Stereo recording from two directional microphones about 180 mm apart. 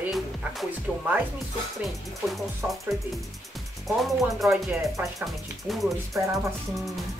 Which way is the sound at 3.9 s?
Centre (ahead or behind).